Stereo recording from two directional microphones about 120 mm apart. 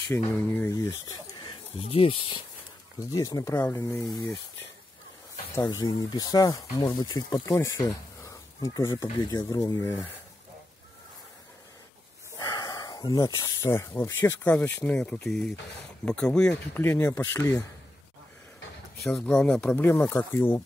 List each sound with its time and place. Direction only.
0.3 s speech: 15° left (ahead or behind)
0.7 s speech: 30° left (ahead or behind)
1.9 s speech: 50° left (ahead or behind)
3.0 s speech: 30° left (ahead or behind)
5.5 s speech: 25° left (ahead or behind)
12.4 s speech: 30° left (ahead or behind)
15.0 s speech: 5° left (ahead or behind)
16.8 s speech: 20° left (ahead or behind)
19.4 s speech: 10° left (ahead or behind)